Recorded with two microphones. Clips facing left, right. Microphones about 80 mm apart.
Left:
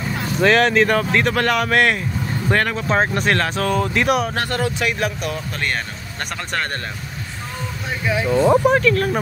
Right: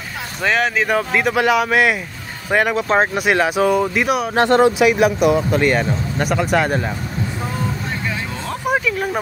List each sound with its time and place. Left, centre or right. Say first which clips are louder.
0.4 s speech: left 3 dB; centre
4.4 s speech: right 9 dB; right
4.7 s speech: right 8 dB; centre
8.1 s speech: left 10 dB; centre
8.6 s speech: left 3 dB; centre